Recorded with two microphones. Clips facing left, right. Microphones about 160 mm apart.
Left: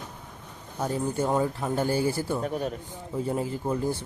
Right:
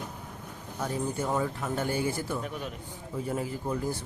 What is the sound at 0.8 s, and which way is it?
Speech, 30° left (ahead or behind).